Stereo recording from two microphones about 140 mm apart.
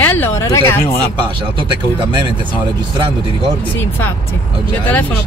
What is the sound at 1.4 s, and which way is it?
Speech, 35° right (ahead or behind).